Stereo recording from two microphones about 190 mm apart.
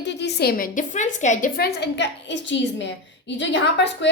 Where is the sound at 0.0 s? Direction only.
65° left (ahead or behind).